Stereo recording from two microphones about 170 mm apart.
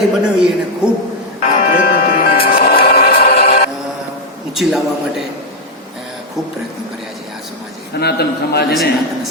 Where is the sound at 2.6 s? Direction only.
60° left (ahead or behind).